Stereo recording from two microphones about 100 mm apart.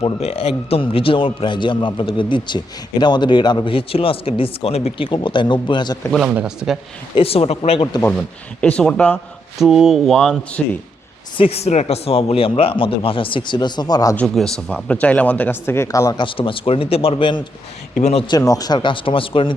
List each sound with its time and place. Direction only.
0.0 s speech: 85° left; by 6.0 s 50° left (ahead or behind)
6.2 s speech: 10° right (ahead or behind)
7.2 s speech: 75° left (ahead or behind); by 7.9 s 90° left
8.6 s speech: 10° left (ahead or behind)
9.6 s speech: 5° right (ahead or behind)
11.3 s speech: 85° left; by 14.2 s 40° left (ahead or behind)
14.3 s speech: 5° left (ahead or behind); by 16.1 s 35° left (ahead or behind)
16.1 s speech: 60° left (ahead or behind)
18.3 s speech: 35° left (ahead or behind); by 19.5 s 60° left (ahead or behind)